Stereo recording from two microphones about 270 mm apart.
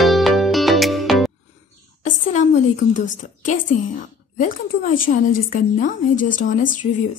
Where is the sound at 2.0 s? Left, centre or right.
Left.